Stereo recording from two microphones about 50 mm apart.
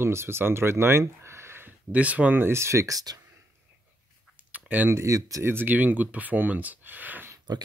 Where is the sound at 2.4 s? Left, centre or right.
Right.